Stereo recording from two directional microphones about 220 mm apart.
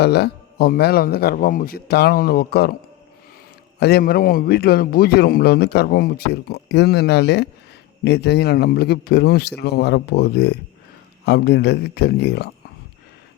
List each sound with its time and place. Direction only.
0.0 s a man's voice: 50° left (ahead or behind)
3.8 s a man's voice: 45° left (ahead or behind)